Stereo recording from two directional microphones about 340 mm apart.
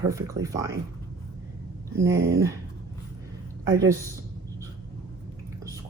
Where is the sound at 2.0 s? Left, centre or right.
Centre.